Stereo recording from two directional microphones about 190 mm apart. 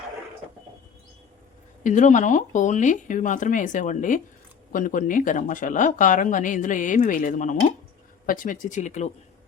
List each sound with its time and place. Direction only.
1.8 s speech: 40° left (ahead or behind)